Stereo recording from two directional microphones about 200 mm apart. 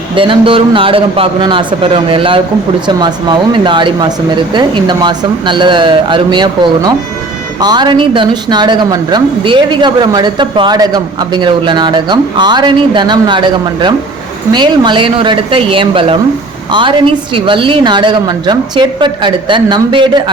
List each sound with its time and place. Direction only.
0.2 s a woman's voice: 25° right (ahead or behind)
17.3 s a woman's voice: 25° right (ahead or behind)